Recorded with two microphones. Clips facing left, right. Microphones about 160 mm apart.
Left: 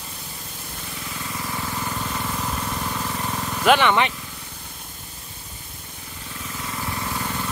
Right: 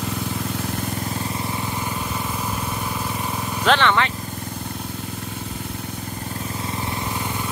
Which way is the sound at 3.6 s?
10° left (ahead or behind).